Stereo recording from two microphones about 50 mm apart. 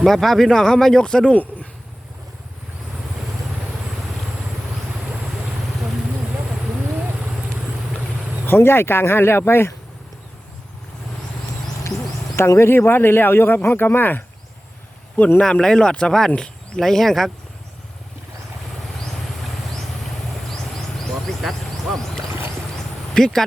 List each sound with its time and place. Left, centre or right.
0.0 s speech: centre
8.4 s speech: left
12.4 s speech: left
15.4 s speech: centre
20.5 s a sound: centre
22.3 s a sound: right
23.1 s speech: centre